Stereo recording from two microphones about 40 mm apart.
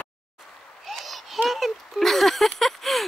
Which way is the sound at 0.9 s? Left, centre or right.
Centre.